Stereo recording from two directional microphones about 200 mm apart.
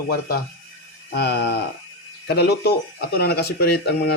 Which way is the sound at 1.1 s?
55° left (ahead or behind).